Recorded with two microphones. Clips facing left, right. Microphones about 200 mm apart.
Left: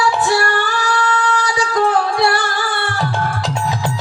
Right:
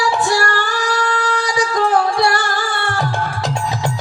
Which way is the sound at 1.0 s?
45° right (ahead or behind).